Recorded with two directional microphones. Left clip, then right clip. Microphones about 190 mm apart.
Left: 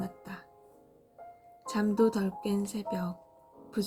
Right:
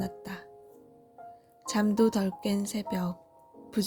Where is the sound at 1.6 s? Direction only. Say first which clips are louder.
Right 1 dB; 45° right (ahead or behind).